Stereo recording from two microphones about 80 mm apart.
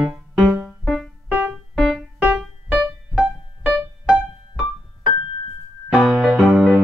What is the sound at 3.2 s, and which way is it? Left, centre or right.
Music, centre.